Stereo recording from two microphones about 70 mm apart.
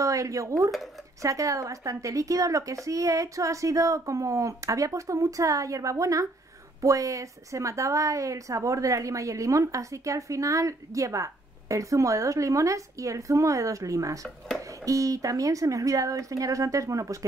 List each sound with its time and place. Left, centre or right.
0.0 s a woman's voice: right